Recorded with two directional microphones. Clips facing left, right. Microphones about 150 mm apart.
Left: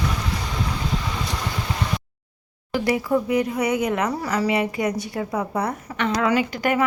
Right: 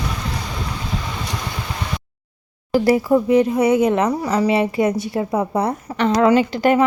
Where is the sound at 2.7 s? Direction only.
35° right (ahead or behind).